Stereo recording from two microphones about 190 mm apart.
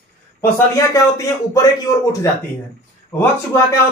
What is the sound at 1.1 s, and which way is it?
A man's voice, 15° left (ahead or behind).